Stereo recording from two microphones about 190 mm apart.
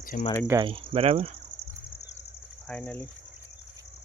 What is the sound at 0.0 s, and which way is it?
Cricket, 45° left (ahead or behind).